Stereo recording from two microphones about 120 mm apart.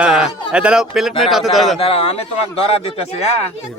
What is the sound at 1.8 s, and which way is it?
Speech, 55° left (ahead or behind).